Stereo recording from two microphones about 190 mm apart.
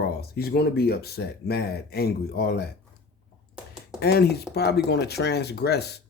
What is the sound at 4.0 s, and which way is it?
Speech, 60° left (ahead or behind).